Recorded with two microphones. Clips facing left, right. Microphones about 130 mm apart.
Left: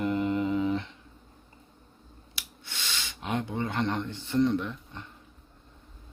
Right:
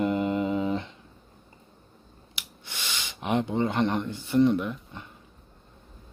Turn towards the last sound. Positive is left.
turn(degrees=-10)  # may be behind; listen again after turning